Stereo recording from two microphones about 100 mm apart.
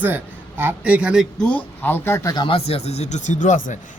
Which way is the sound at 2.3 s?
65° left (ahead or behind).